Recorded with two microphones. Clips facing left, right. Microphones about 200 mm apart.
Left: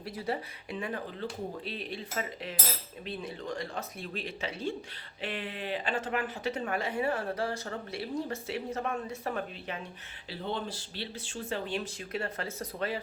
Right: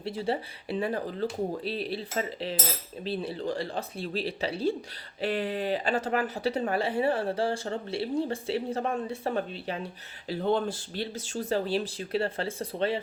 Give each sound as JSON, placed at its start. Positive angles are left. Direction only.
{"t": 0.0, "sound": "speech", "side_deg": -30}